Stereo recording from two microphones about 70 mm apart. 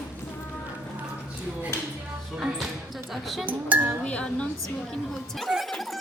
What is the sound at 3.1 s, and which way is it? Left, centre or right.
Speech, centre.